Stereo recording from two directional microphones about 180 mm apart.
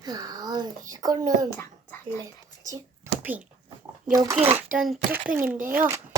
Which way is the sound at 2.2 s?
20° right (ahead or behind).